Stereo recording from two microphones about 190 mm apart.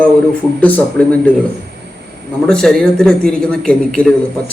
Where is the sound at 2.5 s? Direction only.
5° left (ahead or behind).